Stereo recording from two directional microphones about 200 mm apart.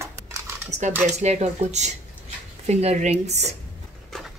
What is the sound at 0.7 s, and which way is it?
Speech, 35° right (ahead or behind).